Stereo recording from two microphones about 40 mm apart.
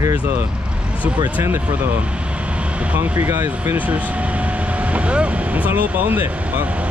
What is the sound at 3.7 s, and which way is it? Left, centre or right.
Speech, right.